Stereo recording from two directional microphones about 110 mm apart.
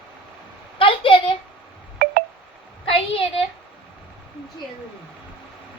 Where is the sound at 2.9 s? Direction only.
55° left (ahead or behind).